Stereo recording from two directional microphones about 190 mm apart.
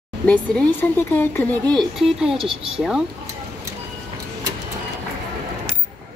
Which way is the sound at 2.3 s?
30° right (ahead or behind).